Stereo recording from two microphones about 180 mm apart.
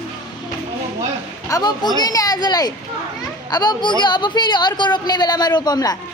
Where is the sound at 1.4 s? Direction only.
20° left (ahead or behind).